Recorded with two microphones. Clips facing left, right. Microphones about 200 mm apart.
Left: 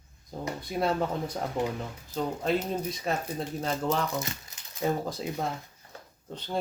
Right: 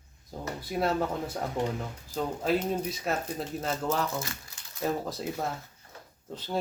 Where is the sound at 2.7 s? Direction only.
5° right (ahead or behind).